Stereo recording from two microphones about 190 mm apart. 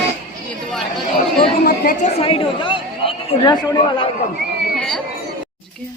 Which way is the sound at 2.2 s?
30° left (ahead or behind).